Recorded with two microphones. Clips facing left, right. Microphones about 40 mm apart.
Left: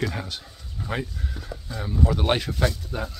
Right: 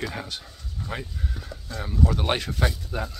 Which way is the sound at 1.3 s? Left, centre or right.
Centre.